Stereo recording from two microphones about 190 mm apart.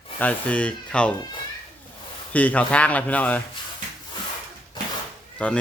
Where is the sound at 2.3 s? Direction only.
10° left (ahead or behind).